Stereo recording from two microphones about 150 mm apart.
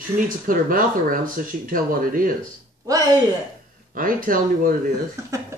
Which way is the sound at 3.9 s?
70° right (ahead or behind).